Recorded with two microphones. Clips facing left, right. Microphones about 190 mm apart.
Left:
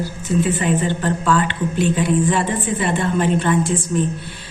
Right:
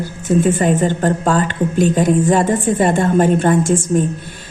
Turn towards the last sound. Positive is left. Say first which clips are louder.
# right 4 dB
turn(degrees=-45)  # may be behind; listen again after turning